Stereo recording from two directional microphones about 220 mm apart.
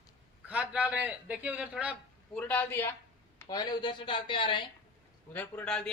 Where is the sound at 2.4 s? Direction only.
5° left (ahead or behind); by 4.7 s 20° left (ahead or behind).